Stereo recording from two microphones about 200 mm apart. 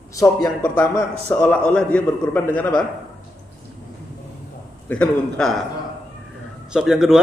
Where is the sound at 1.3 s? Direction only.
10° left (ahead or behind).